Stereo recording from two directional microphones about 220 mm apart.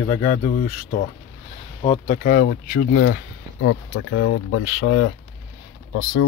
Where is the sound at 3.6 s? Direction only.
70° left (ahead or behind).